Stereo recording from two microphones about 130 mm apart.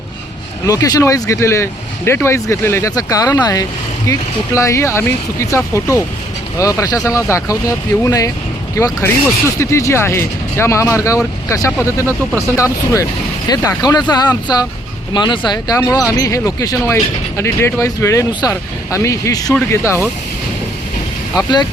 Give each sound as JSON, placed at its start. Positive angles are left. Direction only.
{"t": 0.7, "sound": "speech", "side_deg": 25}
{"t": 18.3, "sound": "speech", "side_deg": 35}
{"t": 18.9, "sound": "speech", "side_deg": 25}
{"t": 21.3, "sound": "speech", "side_deg": 35}